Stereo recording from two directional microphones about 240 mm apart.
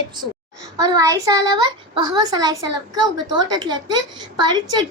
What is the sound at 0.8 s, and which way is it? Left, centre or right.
A child's voice, centre.